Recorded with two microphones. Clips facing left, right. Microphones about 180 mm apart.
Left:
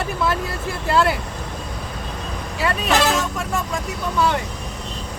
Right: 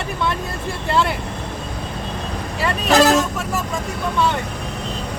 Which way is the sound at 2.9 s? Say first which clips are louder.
Right 6 dB; 40° right (ahead or behind).